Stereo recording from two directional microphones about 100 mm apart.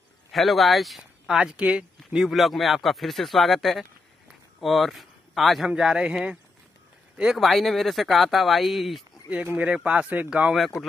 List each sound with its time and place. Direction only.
0.3 s speech: centre (ahead or behind)
9.3 s speech: 15° right (ahead or behind)
10.8 s speech: centre (ahead or behind)